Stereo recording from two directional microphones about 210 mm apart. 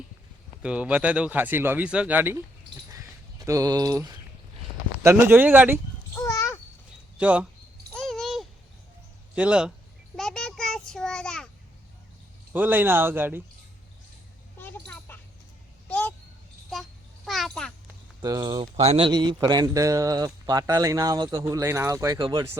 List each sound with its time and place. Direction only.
0.6 s a man's voice: 5° right (ahead or behind)
2.9 s a sound: 15° right (ahead or behind)
5.0 s a man's voice: 10° right (ahead or behind)
6.1 s a sound: 15° left (ahead or behind)
7.2 s a man's voice: 5° right (ahead or behind)
7.9 s a sound: centre (ahead or behind)
9.3 s speech: 5° right (ahead or behind)
10.2 s child singing: centre (ahead or behind)
12.5 s a man's voice: 10° right (ahead or behind)
14.6 s a sound: 10° left (ahead or behind)
17.2 s babbling: centre (ahead or behind)
18.2 s speech: 20° right (ahead or behind)
18.6 s a man's voice: 30° right (ahead or behind)